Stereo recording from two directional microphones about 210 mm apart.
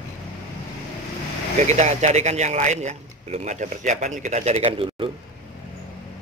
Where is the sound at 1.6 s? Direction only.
35° right (ahead or behind).